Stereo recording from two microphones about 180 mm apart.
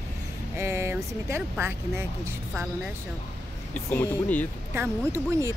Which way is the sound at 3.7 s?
10° left (ahead or behind).